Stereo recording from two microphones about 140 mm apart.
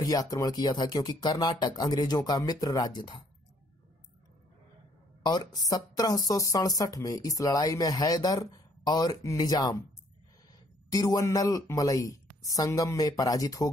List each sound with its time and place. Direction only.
0.0 s a woman's voice: 25° left (ahead or behind)
5.2 s a woman's voice: 30° left (ahead or behind)
10.9 s a woman's voice: 25° left (ahead or behind)